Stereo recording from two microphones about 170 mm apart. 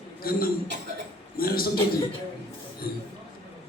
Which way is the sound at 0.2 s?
60° left (ahead or behind).